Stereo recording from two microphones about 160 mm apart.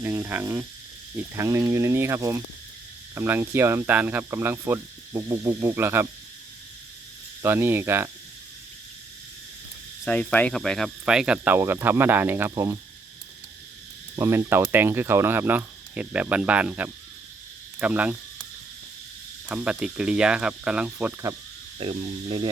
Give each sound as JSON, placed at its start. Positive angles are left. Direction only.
{"t": 0.0, "sound": "speech", "side_deg": -15}
{"t": 7.4, "sound": "speech", "side_deg": -15}
{"t": 10.1, "sound": "speech", "side_deg": 10}
{"t": 14.2, "sound": "speech", "side_deg": -15}
{"t": 17.7, "sound": "cricket", "side_deg": -10}
{"t": 19.5, "sound": "speech", "side_deg": -10}
{"t": 21.8, "sound": "speech", "side_deg": -35}